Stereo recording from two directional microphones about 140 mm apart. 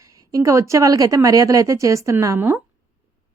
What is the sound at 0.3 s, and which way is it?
A woman's voice, 20° right (ahead or behind).